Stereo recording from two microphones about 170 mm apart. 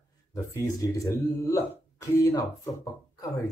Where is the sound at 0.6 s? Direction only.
20° left (ahead or behind).